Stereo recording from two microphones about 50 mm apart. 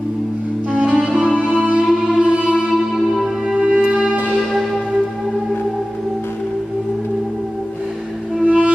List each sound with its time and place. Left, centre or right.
0.7 s music: right
1.9 s music: centre
2.7 s music: centre
3.5 s music: centre
4.4 s music: centre
8.4 s music: right